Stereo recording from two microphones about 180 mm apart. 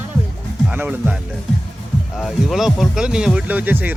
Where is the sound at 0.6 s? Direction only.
10° right (ahead or behind).